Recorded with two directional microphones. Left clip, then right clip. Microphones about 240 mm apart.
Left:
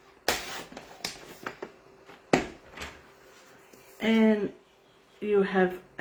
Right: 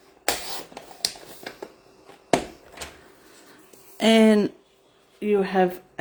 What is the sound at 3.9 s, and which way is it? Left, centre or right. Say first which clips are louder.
Speech: right 7 dB; right.